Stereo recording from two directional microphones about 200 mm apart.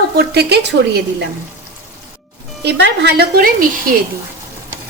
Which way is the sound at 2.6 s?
60° right (ahead or behind).